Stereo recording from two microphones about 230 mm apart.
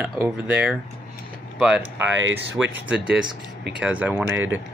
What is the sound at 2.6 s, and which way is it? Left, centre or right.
Speech, centre.